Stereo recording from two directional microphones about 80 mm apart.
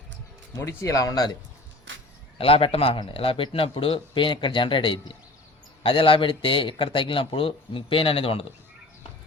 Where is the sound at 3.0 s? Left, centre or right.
Left.